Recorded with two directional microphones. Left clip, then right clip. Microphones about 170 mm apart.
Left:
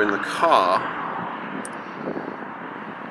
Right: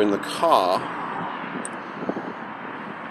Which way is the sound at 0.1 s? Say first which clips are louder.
Left 1 dB; 30° right (ahead or behind).